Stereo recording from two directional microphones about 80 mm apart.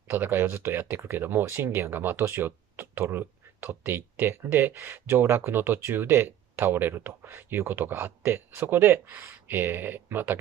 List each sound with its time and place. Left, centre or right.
0.1 s speech: right